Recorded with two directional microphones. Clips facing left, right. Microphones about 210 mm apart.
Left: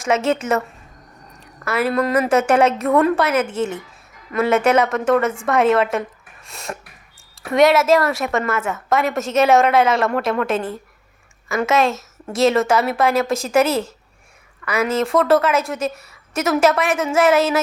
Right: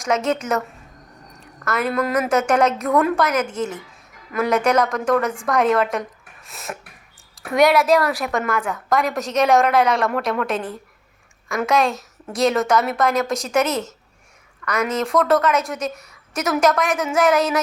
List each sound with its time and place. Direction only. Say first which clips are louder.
0.0 s a woman's voice: left 2 dB; 5° left (ahead or behind)
1.6 s a woman's voice: left 2 dB; 5° left (ahead or behind)
13.2 s speech: left 3 dB; 30° left (ahead or behind)
13.5 s a woman's voice: left 5 dB; 5° left (ahead or behind)